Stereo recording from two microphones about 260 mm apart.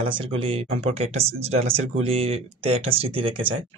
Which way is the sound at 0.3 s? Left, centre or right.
Right.